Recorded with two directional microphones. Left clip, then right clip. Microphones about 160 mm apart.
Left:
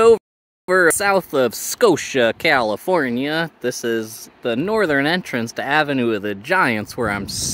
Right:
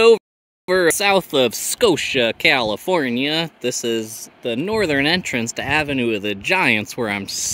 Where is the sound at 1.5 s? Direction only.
Centre (ahead or behind).